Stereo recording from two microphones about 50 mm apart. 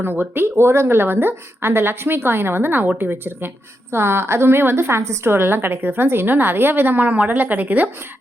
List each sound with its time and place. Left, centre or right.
0.0 s a woman's voice: right
5.3 s a woman's voice: right